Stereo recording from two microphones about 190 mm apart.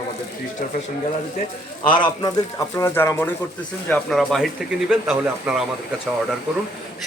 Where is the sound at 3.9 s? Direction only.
Centre (ahead or behind).